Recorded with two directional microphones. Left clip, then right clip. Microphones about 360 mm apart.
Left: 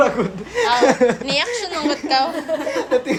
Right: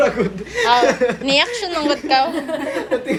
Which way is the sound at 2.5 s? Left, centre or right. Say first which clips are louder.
Left 1 dB; centre.